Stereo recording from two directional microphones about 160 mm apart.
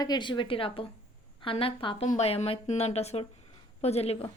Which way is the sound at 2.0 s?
45° left (ahead or behind).